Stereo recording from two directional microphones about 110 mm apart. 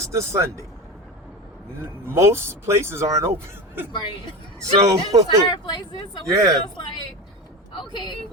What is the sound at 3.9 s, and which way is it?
Speech, 45° left (ahead or behind).